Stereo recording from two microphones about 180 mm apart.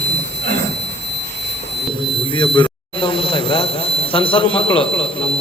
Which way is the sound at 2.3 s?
25° left (ahead or behind).